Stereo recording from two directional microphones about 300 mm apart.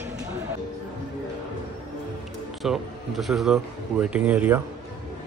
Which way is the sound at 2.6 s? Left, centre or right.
Centre.